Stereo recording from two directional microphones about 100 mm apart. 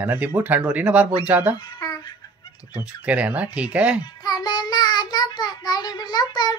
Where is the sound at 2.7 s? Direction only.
15° right (ahead or behind).